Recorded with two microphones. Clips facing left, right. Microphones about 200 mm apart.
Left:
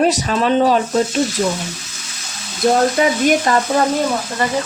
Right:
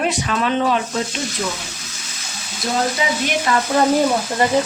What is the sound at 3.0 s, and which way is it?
Frying, 50° left (ahead or behind).